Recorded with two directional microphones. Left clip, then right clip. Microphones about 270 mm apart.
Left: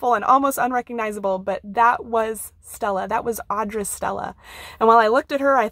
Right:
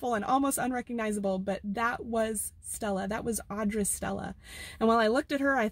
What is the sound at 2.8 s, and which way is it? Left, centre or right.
Speech, left.